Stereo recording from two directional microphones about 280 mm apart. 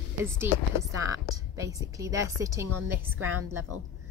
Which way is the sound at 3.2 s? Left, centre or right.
Right.